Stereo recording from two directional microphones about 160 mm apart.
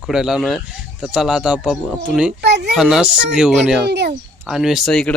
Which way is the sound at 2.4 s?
90° right.